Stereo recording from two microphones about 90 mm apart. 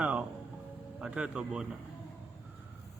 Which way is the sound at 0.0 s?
15° right (ahead or behind).